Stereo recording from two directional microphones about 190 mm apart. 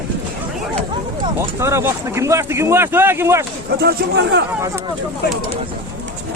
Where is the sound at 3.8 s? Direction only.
60° right (ahead or behind).